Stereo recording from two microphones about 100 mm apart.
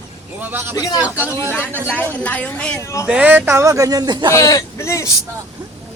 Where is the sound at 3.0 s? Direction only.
15° right (ahead or behind); by 4.3 s 45° right (ahead or behind).